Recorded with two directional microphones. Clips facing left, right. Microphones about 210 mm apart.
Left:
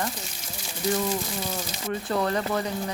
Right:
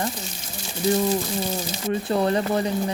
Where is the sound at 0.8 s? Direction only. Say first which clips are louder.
Right 5 dB; 25° right (ahead or behind).